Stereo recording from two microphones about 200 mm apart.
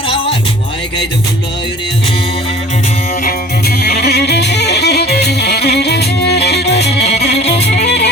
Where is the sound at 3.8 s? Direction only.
55° left (ahead or behind).